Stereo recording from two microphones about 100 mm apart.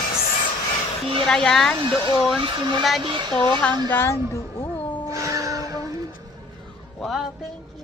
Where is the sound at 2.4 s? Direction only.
45° right (ahead or behind).